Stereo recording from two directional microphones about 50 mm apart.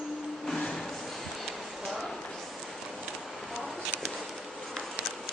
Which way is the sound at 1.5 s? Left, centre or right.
Centre.